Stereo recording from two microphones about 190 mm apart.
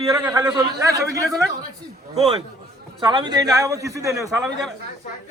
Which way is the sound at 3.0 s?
20° right (ahead or behind).